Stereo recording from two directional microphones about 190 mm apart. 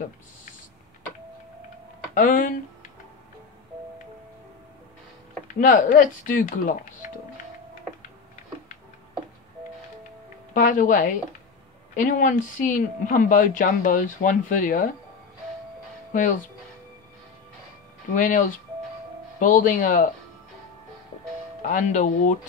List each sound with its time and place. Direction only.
2.1 s speech: 45° left (ahead or behind)
5.6 s speech: 45° left (ahead or behind)
10.5 s speech: 45° left (ahead or behind)
16.1 s speech: 45° left (ahead or behind)
18.1 s speech: 45° left (ahead or behind)
19.4 s speech: 45° left (ahead or behind)
21.6 s speech: 40° left (ahead or behind)